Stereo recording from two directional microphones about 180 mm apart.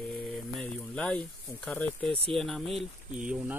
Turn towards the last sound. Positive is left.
turn(degrees=-5)  # may be behind; listen again after turning